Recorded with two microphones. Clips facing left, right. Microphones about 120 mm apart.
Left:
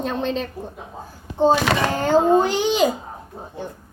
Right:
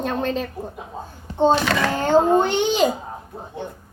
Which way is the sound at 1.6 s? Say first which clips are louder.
Left 1 dB; 25° left (ahead or behind).